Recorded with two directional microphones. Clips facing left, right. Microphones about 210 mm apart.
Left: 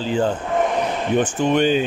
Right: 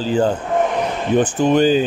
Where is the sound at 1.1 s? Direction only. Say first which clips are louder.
Right 4 dB; 35° right (ahead or behind).